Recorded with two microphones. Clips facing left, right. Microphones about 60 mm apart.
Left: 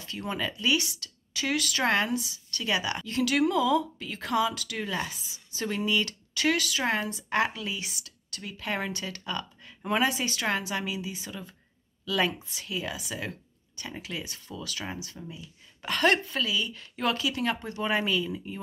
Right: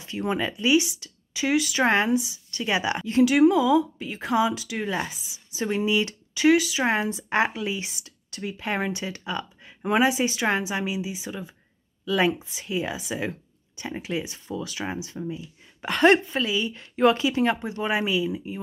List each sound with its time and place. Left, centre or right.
0.0 s speech: right
17.8 s speech: centre